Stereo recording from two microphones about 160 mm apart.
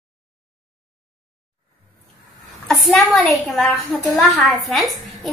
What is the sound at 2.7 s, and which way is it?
A woman's voice, centre (ahead or behind).